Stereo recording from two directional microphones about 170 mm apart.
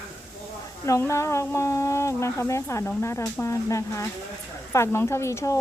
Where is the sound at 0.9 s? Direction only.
15° left (ahead or behind).